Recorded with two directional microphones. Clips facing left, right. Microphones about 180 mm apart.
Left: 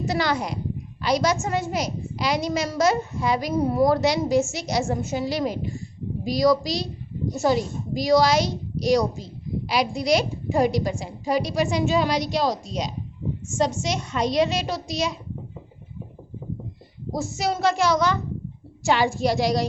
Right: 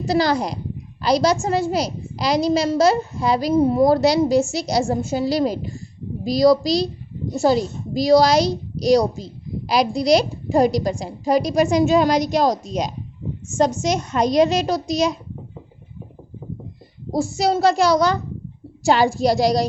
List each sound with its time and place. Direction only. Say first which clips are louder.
0.0 s a woman's voice: right 5 dB; 35° right (ahead or behind)
17.1 s a woman's voice: right 6 dB; 35° right (ahead or behind)